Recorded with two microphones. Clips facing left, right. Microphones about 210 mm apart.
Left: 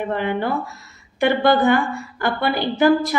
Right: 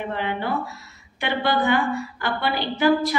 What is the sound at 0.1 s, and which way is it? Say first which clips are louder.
A woman's voice: left 4 dB; 45° left (ahead or behind).